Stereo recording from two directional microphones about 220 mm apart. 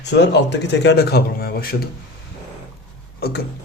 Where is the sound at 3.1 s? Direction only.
45° left (ahead or behind).